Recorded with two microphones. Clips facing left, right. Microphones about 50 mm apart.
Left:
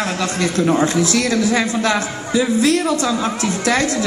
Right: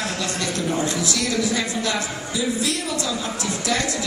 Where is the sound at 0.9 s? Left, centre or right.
Left.